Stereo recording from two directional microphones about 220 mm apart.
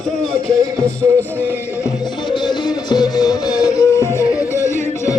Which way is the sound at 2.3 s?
20° left (ahead or behind).